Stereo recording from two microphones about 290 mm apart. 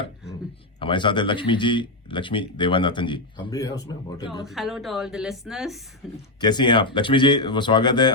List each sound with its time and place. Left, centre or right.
0.8 s speech: centre
4.4 s a woman's voice: centre
6.4 s speech: centre